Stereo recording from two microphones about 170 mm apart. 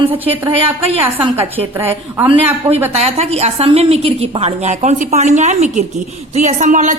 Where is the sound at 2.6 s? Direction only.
35° right (ahead or behind).